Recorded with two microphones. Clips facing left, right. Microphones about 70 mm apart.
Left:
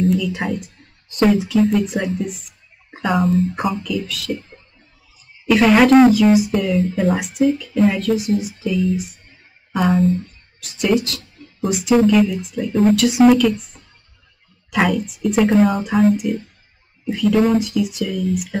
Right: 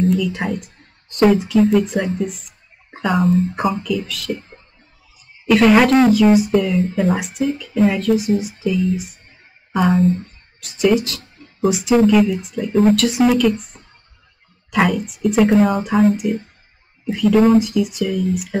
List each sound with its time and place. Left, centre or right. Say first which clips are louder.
0.1 s speech: right 1 dB; centre
5.5 s speech: even; centre
13.7 s music: right 2 dB; right
14.7 s speech: right 1 dB; centre
17.4 s speech: right 5 dB; centre